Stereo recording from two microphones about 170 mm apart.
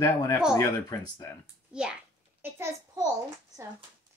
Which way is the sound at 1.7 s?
5° right (ahead or behind).